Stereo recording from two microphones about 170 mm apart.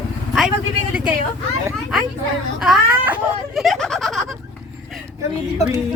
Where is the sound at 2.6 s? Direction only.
5° right (ahead or behind).